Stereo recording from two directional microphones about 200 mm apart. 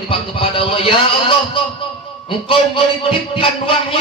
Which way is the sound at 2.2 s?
25° left (ahead or behind).